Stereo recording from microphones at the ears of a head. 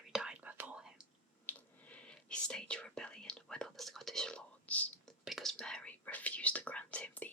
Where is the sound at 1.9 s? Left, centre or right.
Centre.